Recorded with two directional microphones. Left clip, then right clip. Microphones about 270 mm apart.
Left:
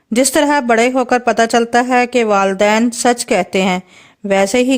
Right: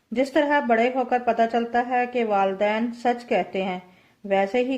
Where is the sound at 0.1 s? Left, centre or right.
Left.